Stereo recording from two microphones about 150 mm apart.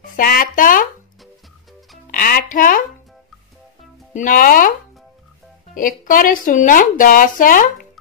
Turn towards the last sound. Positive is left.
turn(degrees=65)  # may be behind; listen again after turning